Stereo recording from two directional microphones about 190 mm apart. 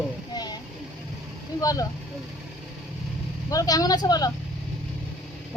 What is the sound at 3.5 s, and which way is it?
Speech, 20° left (ahead or behind).